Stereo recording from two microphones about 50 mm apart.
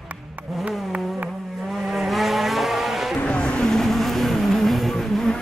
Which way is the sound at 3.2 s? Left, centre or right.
Left.